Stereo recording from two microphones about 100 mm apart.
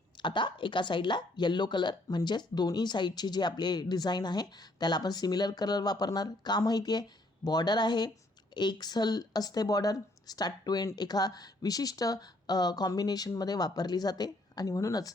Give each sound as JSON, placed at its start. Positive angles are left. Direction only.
{"t": 0.2, "sound": "speech", "side_deg": 50}